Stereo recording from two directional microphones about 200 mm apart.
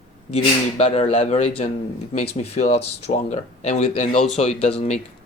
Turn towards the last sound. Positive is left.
turn(degrees=35)  # may be behind; listen again after turning